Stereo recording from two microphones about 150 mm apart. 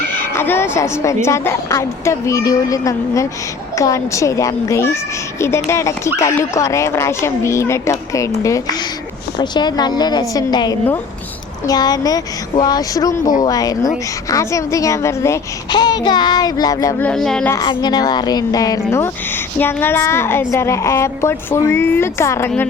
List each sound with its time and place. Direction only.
0.1 s a woman's voice: 15° left (ahead or behind)
17.0 s a woman's voice: 5° left (ahead or behind)
17.6 s a woman's voice: 30° left (ahead or behind)